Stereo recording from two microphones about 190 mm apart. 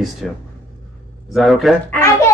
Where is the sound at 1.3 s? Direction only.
Centre (ahead or behind).